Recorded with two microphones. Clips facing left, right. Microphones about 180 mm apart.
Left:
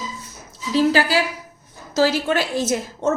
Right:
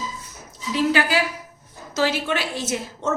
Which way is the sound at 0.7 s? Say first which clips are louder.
Left 3 dB; 35° left (ahead or behind).